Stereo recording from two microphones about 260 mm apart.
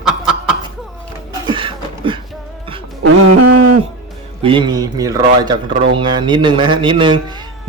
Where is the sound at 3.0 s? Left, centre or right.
Right.